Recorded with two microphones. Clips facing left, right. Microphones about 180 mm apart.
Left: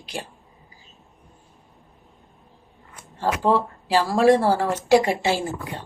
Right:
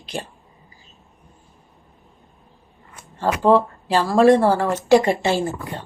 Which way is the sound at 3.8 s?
10° left (ahead or behind).